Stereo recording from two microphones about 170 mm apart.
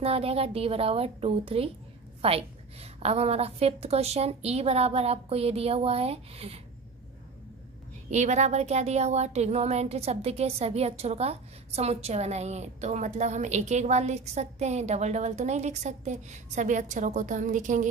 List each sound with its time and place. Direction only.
0.0 s speech: 35° right (ahead or behind)
8.1 s speech: 45° right (ahead or behind)